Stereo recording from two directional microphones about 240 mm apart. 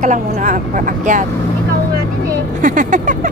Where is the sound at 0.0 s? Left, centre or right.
Right.